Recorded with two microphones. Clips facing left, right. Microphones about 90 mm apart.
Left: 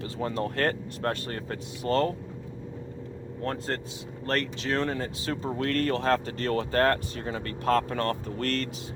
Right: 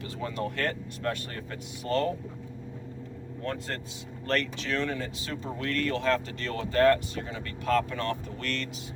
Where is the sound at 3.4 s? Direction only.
35° left (ahead or behind).